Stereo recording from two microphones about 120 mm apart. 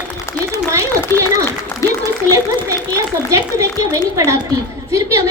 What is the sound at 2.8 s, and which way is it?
A woman's voice, 25° right (ahead or behind).